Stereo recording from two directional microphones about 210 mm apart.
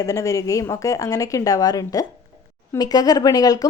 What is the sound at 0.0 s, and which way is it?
A woman's voice, 15° left (ahead or behind).